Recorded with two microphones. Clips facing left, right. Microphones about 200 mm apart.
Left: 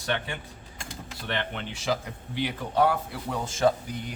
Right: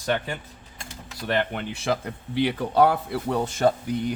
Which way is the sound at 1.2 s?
45° right (ahead or behind).